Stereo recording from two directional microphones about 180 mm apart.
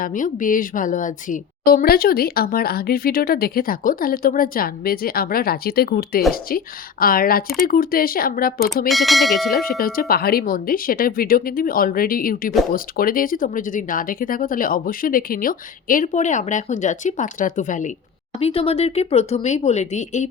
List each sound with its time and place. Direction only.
0.0 s a woman's voice: 45° left (ahead or behind)
8.9 s speech: centre (ahead or behind)
9.6 s speech: 55° left (ahead or behind)
18.3 s speech: 30° left (ahead or behind)